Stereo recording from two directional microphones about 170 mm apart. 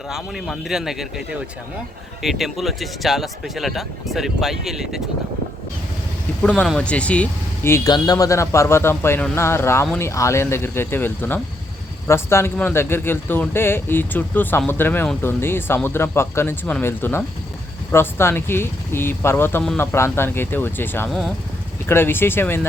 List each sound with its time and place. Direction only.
0.1 s speech: centre (ahead or behind)
6.4 s speech: 5° left (ahead or behind)
21.1 s speech: centre (ahead or behind)
21.8 s speech: 15° left (ahead or behind)